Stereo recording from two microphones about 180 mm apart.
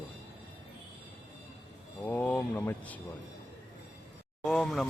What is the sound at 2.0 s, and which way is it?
Speech, 10° left (ahead or behind).